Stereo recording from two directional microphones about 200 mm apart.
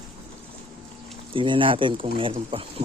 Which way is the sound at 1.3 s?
25° right (ahead or behind).